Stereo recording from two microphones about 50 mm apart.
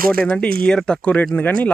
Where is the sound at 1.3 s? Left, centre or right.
Left.